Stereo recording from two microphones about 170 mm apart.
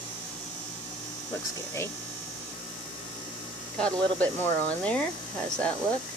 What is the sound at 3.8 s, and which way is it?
Speech, 5° left (ahead or behind).